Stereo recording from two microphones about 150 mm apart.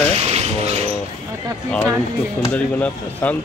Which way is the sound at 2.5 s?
10° left (ahead or behind).